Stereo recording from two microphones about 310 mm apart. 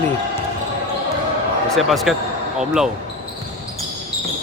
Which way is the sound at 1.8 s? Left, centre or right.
Centre.